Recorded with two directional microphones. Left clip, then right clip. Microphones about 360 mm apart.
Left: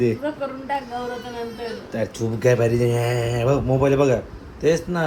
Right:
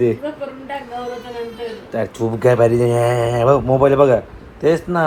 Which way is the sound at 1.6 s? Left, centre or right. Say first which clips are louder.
Right 5 dB; centre.